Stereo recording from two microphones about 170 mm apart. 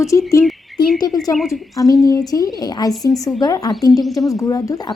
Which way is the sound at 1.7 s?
20° left (ahead or behind).